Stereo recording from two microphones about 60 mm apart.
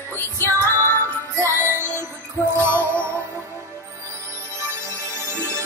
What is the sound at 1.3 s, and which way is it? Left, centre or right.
Music, right.